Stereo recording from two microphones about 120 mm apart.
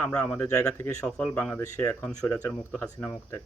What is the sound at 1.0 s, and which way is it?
Speech, 10° left (ahead or behind).